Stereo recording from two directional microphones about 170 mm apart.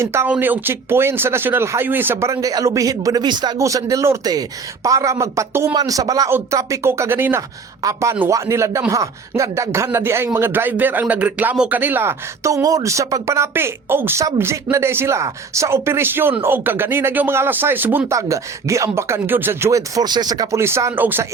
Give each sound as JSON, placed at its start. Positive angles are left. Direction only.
{"t": 0.0, "sound": "speech", "side_deg": -15}